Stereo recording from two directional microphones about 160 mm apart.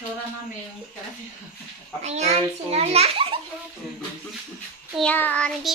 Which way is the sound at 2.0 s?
45° right (ahead or behind).